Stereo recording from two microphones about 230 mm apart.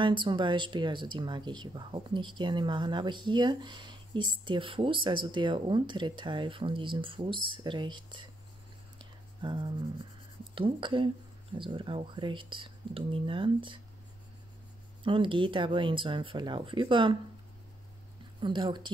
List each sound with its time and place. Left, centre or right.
0.0 s speech: right
8.9 s a sound: centre
10.5 s speech: right
15.0 s speech: right
18.4 s speech: right